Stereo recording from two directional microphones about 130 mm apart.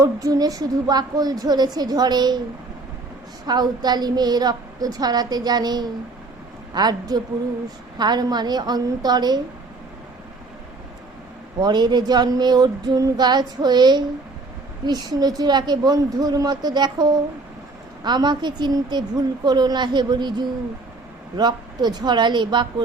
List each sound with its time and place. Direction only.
0.0 s a woman's voice: 25° right (ahead or behind)
3.4 s a woman's voice: 35° right (ahead or behind)
11.6 s a woman's voice: 35° right (ahead or behind)